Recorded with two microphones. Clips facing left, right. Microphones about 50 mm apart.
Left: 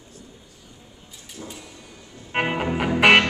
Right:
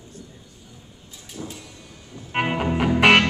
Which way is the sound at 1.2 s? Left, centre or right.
Centre.